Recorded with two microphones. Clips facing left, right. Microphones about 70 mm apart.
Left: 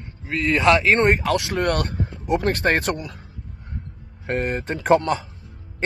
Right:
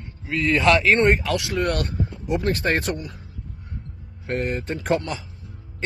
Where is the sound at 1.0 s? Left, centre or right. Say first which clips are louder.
Even; left.